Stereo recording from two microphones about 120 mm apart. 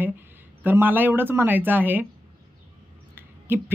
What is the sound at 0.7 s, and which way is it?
Speech, 15° right (ahead or behind).